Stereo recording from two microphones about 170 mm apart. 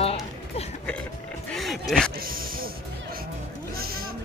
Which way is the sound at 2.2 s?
60° right (ahead or behind).